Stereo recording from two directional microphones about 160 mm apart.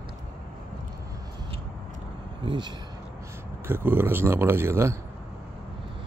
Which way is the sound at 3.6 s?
15° right (ahead or behind).